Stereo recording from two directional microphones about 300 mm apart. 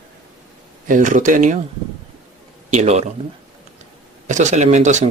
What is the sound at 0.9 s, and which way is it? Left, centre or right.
Speech, right.